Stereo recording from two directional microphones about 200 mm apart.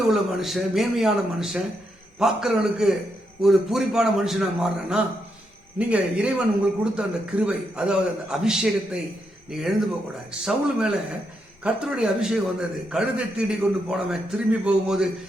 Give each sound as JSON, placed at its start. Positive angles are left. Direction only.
{"t": 0.1, "sound": "a man's voice", "side_deg": 0}